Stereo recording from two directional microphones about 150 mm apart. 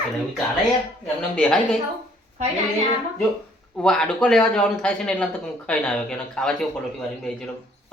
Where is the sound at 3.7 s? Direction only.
5° left (ahead or behind).